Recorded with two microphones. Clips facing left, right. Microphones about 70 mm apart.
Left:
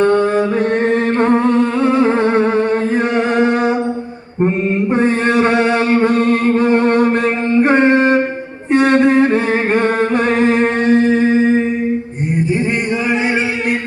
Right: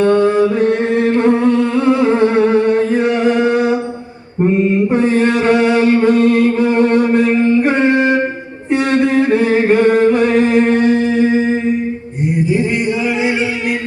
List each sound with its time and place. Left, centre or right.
0.9 s humming: left
2.9 s music: left
4.4 s mantra: left
4.9 s a sound: left
7.3 s music: left
9.7 s singing: left
10.2 s music: left